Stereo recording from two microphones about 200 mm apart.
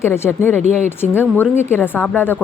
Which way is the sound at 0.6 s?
35° right (ahead or behind).